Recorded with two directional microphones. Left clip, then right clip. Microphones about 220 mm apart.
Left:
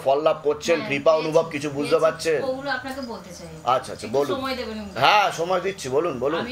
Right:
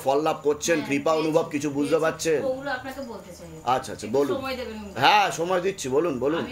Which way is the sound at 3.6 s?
35° right (ahead or behind).